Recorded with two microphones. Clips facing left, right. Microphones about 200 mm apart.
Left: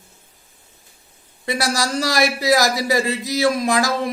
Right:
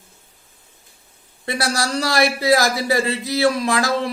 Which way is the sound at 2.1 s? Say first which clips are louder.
Right 1 dB; 20° left (ahead or behind).